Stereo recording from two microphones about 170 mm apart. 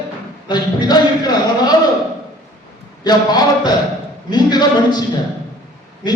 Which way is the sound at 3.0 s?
25° left (ahead or behind).